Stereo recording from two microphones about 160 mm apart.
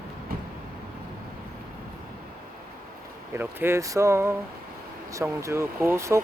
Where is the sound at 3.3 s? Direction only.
15° right (ahead or behind).